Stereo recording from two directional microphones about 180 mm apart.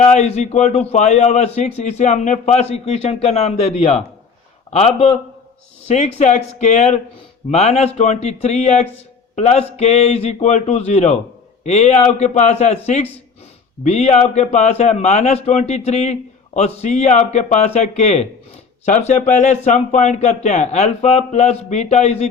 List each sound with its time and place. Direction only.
0.0 s a man's voice: 40° left (ahead or behind)